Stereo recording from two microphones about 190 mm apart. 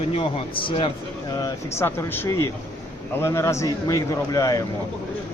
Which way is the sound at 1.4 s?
15° left (ahead or behind).